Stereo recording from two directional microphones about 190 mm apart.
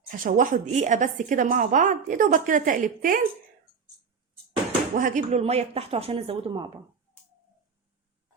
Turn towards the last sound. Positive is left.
turn(degrees=-25)  # may be behind; listen again after turning